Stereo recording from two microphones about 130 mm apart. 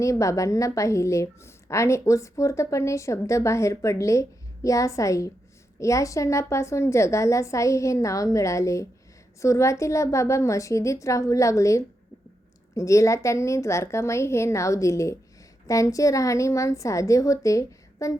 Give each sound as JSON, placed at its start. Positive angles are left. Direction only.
{"t": 0.0, "sound": "a woman's voice", "side_deg": 25}